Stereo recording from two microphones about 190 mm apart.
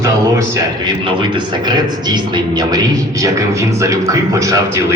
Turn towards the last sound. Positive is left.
turn(degrees=-15)  # may be behind; listen again after turning